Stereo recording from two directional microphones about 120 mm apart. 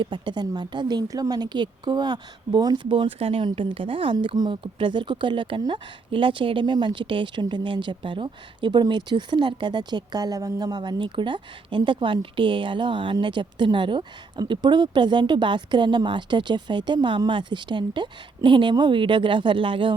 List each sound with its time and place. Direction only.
0.0 s speech: 40° right (ahead or behind)
2.9 s speech: 50° right (ahead or behind)